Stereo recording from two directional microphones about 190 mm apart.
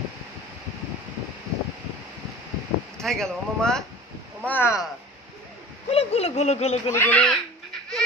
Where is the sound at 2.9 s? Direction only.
5° left (ahead or behind).